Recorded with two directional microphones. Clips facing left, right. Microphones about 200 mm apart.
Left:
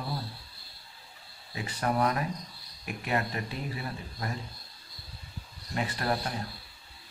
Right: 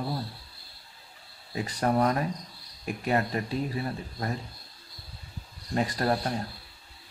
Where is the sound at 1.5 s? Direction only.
40° right (ahead or behind).